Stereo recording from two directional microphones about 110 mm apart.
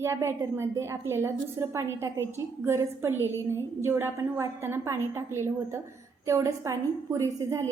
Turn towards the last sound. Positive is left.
turn(degrees=-30)  # may be behind; listen again after turning